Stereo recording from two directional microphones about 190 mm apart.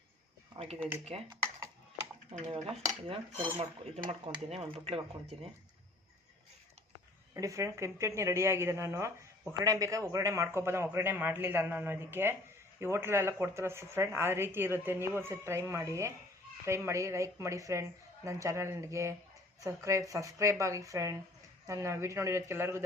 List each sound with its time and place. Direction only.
0.5 s speech: 35° right (ahead or behind)
0.8 s speech: 10° right (ahead or behind)
1.0 s speech: 30° right (ahead or behind)
2.4 s stir: 25° right (ahead or behind)
3.6 s speech: 35° right (ahead or behind)
7.3 s speech: 15° right (ahead or behind)